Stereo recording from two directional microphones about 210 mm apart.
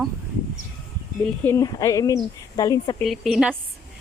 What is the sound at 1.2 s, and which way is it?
Speech, 10° left (ahead or behind).